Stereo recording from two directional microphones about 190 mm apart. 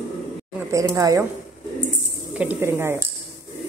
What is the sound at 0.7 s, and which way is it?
Speech, 20° right (ahead or behind).